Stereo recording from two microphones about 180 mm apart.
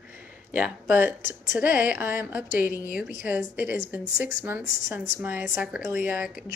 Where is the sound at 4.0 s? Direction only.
50° left (ahead or behind).